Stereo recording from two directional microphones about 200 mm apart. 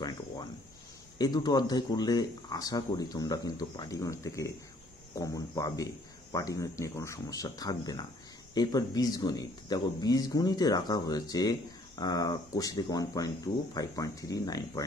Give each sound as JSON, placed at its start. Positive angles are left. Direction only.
{"t": 1.1, "sound": "speech", "side_deg": 20}